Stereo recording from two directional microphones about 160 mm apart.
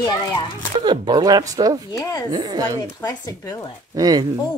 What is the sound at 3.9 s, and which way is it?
Speech, 25° right (ahead or behind).